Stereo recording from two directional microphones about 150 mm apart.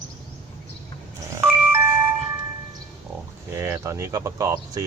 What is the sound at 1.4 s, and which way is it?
Doorbell, 15° right (ahead or behind).